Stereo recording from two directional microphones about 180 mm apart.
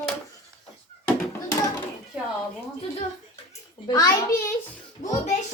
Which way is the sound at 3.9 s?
20° left (ahead or behind).